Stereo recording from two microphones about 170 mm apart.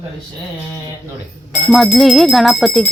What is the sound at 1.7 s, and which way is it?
Speech, centre (ahead or behind).